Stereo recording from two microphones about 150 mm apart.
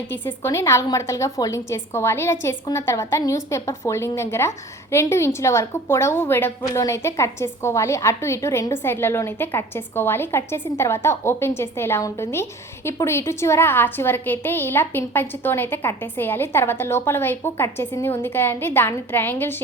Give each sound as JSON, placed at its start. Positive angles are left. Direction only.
{"t": 0.1, "sound": "a woman's voice", "side_deg": 15}